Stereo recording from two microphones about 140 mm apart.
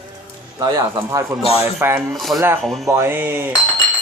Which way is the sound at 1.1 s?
20° right (ahead or behind).